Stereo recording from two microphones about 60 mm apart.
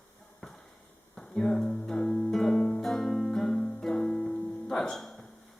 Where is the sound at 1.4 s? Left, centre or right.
Centre.